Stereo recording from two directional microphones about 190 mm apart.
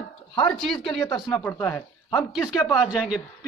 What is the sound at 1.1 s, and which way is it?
Speech, 20° left (ahead or behind).